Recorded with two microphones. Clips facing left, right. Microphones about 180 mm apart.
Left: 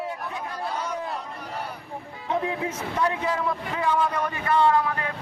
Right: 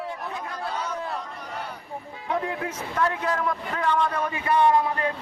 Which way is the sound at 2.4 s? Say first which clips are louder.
Left 2 dB; 10° left (ahead or behind).